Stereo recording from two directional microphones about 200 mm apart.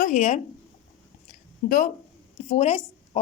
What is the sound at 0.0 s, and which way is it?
Speech, 35° left (ahead or behind).